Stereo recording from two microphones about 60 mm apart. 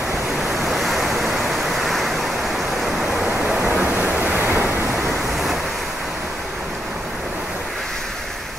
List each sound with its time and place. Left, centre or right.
0.4 s waves: centre
2.8 s waterfall: centre
3.3 s waves: right